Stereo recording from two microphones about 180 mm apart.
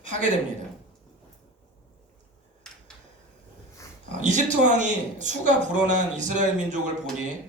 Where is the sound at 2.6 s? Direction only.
5° left (ahead or behind).